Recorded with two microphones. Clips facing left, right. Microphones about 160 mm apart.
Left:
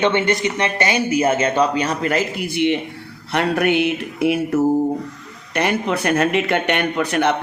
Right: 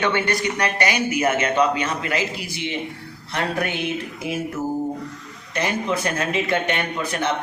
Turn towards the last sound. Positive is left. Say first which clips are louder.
# left 6 dB
turn(degrees=65)  # may be behind; listen again after turning